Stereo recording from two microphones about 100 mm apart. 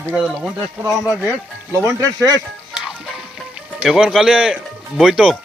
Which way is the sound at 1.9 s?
35° right (ahead or behind).